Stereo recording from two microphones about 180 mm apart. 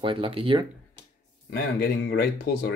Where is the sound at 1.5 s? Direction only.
65° left (ahead or behind).